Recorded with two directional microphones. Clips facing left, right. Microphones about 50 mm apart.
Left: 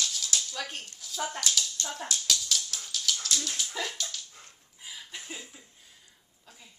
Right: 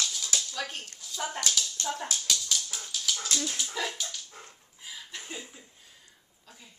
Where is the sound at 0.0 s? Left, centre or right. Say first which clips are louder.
Even; centre.